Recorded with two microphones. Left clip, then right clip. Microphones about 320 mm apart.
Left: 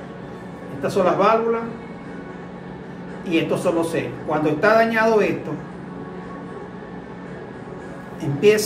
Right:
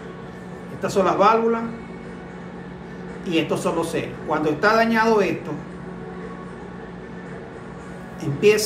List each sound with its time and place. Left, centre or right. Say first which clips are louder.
0.8 s a man's voice: even; centre
3.3 s a man's voice: left 2 dB; centre
8.2 s a woman's voice: left 1 dB; centre